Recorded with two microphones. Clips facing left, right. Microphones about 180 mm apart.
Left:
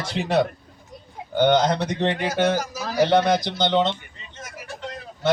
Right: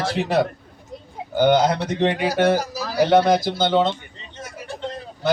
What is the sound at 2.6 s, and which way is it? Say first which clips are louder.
Speech: right 1 dB; 35° right (ahead or behind).